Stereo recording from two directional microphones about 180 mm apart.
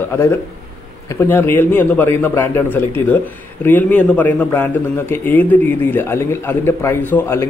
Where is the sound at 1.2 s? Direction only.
10° left (ahead or behind).